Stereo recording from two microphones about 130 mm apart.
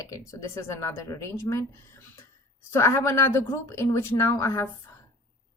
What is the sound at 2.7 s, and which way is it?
A woman's voice, 20° left (ahead or behind).